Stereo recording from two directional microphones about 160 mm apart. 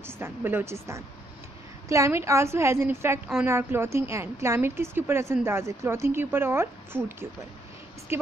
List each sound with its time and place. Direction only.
0.0 s speech: 15° right (ahead or behind)